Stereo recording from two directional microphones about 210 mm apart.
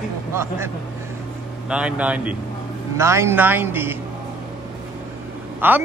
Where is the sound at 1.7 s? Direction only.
5° right (ahead or behind).